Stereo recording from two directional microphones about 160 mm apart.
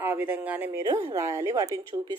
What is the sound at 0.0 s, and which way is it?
A woman's voice, 10° right (ahead or behind).